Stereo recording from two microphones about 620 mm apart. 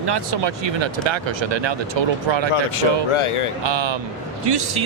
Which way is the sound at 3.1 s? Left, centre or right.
Left.